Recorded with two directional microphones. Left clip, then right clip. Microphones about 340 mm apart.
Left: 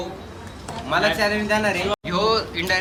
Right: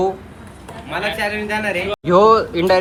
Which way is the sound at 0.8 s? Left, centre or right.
Centre.